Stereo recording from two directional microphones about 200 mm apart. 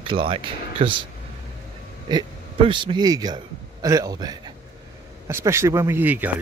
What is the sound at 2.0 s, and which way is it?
A man's voice, 25° right (ahead or behind).